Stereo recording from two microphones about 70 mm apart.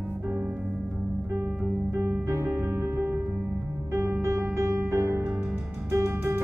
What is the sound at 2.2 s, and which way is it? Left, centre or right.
Music, right.